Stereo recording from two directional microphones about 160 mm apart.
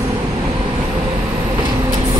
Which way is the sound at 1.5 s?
25° right (ahead or behind).